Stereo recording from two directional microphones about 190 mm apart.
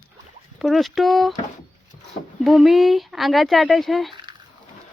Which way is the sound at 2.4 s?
Centre (ahead or behind).